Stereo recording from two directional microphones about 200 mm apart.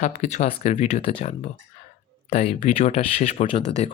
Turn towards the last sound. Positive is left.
turn(degrees=30)  # may be behind; listen again after turning